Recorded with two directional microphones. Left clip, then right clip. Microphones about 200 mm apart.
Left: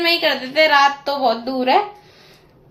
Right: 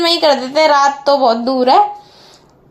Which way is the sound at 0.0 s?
30° right (ahead or behind).